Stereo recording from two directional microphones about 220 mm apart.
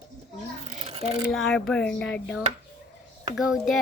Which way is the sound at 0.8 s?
30° right (ahead or behind).